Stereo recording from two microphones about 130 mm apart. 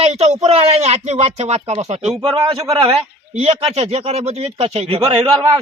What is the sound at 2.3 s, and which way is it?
Speech, 30° right (ahead or behind).